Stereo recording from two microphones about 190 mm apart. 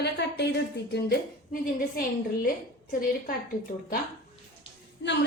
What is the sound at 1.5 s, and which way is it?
Speech, 45° left (ahead or behind).